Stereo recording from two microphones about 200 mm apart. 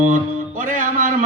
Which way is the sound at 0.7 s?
40° right (ahead or behind).